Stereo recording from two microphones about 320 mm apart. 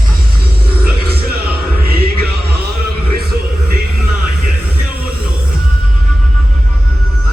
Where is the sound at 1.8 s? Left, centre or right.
Right.